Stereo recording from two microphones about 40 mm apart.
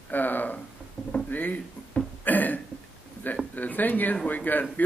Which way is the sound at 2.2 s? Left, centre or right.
Left.